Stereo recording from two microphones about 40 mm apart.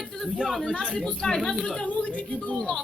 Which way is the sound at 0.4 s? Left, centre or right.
Centre.